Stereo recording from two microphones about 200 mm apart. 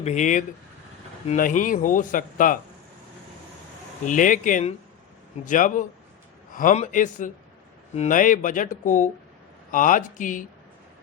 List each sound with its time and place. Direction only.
0.0 s speech: 35° left (ahead or behind)
4.0 s speech: 40° left (ahead or behind)